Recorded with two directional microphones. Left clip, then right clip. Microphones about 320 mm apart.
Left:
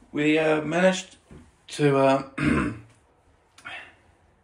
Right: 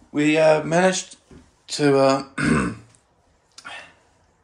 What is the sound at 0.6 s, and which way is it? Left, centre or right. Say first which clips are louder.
Speech: right 3 dB; right.